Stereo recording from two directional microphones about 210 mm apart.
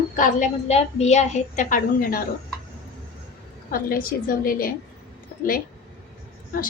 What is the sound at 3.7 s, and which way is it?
A woman's voice, 45° left (ahead or behind).